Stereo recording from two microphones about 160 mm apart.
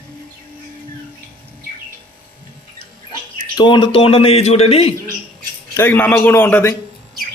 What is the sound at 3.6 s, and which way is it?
A man's voice, 30° left (ahead or behind).